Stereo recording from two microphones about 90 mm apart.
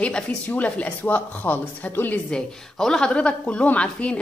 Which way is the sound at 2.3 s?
10° left (ahead or behind).